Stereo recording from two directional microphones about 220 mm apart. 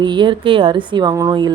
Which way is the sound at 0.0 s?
20° right (ahead or behind).